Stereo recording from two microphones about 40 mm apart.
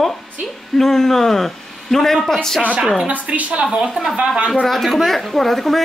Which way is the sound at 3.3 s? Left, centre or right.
Right.